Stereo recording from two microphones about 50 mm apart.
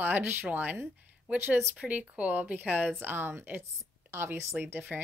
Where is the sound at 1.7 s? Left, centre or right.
Right.